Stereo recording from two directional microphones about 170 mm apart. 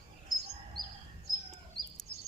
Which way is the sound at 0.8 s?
25° right (ahead or behind).